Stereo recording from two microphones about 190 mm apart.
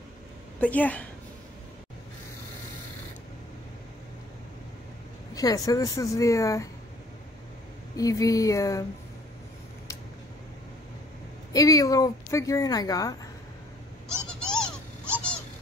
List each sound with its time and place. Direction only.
0.6 s speech: 10° left (ahead or behind)
5.3 s speech: 20° left (ahead or behind)
7.9 s speech: 20° left (ahead or behind)
11.5 s speech: 20° left (ahead or behind)
14.0 s goat: 5° left (ahead or behind)